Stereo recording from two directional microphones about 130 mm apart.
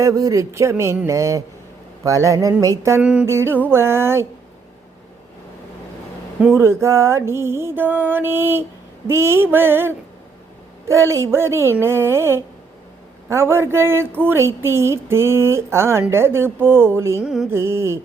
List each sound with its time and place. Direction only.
0.0 s speech: 25° right (ahead or behind)
3.0 s mantra: 10° right (ahead or behind)
3.2 s speech: 20° right (ahead or behind)
6.6 s speech: 20° right (ahead or behind)
9.0 s mantra: 20° right (ahead or behind)
10.8 s speech: 25° right (ahead or behind)
17.2 s music: 5° right (ahead or behind)
17.5 s speech: 20° right (ahead or behind)